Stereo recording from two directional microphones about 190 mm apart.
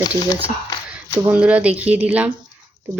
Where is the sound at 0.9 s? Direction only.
5° right (ahead or behind).